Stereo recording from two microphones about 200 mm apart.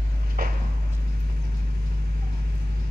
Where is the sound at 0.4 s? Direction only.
50° right (ahead or behind).